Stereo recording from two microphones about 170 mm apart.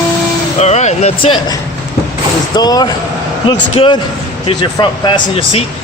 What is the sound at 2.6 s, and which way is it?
Speech, 25° left (ahead or behind).